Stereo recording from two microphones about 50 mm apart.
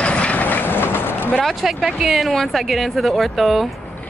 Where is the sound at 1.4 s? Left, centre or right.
Centre.